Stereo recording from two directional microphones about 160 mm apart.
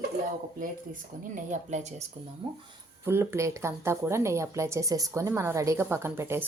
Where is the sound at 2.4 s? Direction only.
35° right (ahead or behind).